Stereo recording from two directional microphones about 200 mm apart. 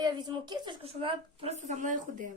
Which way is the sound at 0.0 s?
20° right (ahead or behind).